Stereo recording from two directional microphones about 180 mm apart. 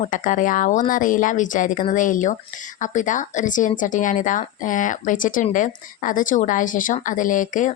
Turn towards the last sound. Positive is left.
turn(degrees=45)  # may be behind; listen again after turning